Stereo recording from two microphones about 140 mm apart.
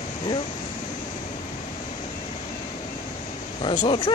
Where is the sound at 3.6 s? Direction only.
35° left (ahead or behind).